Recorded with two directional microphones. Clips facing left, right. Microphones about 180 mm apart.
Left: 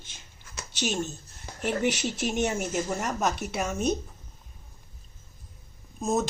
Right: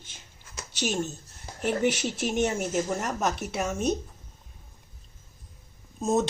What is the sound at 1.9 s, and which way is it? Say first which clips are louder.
Speech: even; 5° right (ahead or behind).